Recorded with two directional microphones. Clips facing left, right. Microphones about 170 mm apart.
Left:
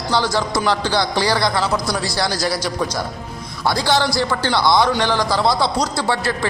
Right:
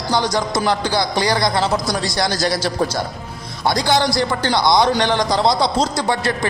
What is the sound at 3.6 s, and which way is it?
A man's voice, 20° right (ahead or behind).